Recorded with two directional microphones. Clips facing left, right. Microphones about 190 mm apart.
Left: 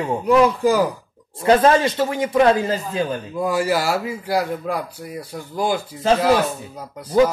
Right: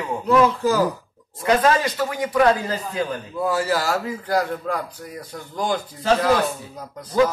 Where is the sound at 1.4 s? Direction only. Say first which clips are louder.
Left 4 dB; 30° left (ahead or behind).